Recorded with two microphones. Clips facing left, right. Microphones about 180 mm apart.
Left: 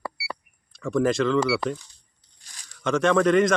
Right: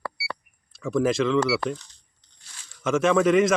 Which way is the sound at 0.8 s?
Centre (ahead or behind).